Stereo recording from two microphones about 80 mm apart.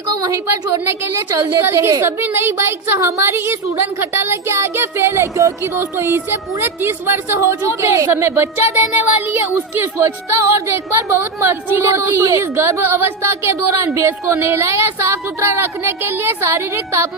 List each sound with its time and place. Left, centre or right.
0.2 s a woman's voice: right
1.6 s a woman's voice: right